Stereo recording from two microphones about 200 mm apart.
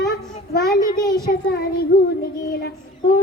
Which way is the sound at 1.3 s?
50° left (ahead or behind).